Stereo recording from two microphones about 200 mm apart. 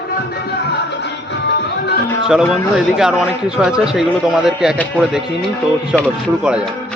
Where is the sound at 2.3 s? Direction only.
5° right (ahead or behind).